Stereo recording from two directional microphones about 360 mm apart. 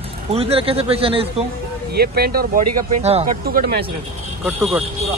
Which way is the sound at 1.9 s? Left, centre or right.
Right.